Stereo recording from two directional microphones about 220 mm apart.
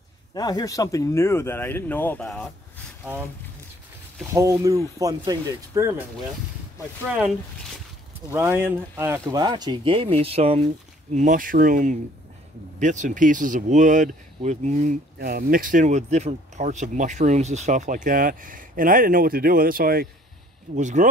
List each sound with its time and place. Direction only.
0.3 s speech: 15° left (ahead or behind)
4.3 s speech: 15° right (ahead or behind)
7.1 s speech: 5° right (ahead or behind); by 10.6 s 25° right (ahead or behind)
11.1 s speech: 35° right (ahead or behind)